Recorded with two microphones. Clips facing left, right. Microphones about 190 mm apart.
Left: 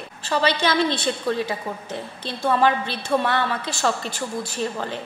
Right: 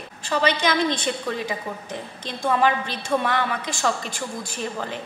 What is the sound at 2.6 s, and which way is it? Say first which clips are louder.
A woman's voice: left 1 dB; 15° right (ahead or behind).